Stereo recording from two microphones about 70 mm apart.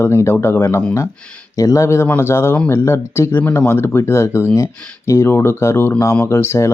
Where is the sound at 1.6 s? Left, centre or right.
Left.